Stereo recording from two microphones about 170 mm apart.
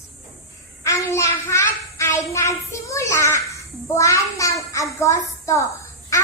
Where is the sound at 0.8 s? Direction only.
20° left (ahead or behind).